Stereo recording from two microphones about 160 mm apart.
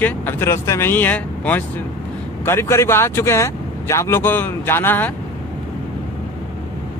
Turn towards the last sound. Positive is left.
turn(degrees=10)  # may be behind; listen again after turning